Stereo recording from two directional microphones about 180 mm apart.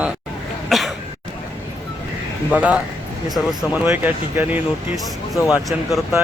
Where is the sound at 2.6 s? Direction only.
5° right (ahead or behind).